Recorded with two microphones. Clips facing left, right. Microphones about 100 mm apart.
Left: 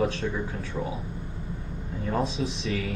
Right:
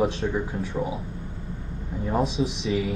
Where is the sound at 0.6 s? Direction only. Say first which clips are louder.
Right 4 dB; 20° right (ahead or behind).